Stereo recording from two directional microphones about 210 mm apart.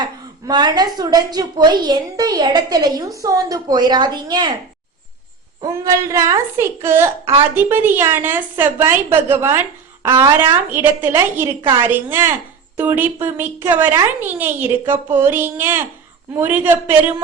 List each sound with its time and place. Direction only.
0.0 s a sound: 20° right (ahead or behind)
0.9 s a woman's voice: 20° right (ahead or behind)
5.6 s a woman's voice: 15° right (ahead or behind)